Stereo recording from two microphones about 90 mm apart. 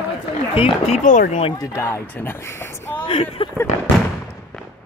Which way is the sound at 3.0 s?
85° left.